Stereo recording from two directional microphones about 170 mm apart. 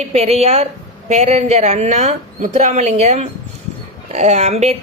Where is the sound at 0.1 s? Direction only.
35° right (ahead or behind).